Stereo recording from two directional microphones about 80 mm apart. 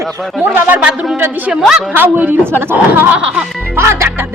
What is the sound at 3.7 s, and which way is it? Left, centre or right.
Music, right.